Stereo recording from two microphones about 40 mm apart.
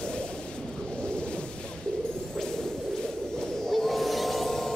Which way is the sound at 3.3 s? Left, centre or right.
Centre.